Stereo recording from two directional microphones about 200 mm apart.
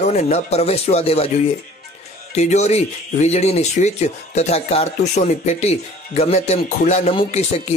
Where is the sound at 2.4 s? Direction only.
35° left (ahead or behind).